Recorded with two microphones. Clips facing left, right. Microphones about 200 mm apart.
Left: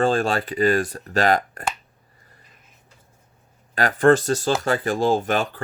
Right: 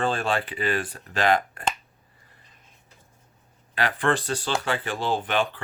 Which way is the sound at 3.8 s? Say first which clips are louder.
Left 8 dB; 45° left (ahead or behind).